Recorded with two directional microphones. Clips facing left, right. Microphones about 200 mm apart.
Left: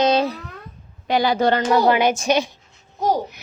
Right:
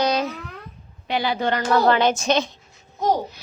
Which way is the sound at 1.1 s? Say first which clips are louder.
Left 5 dB; 45° left (ahead or behind).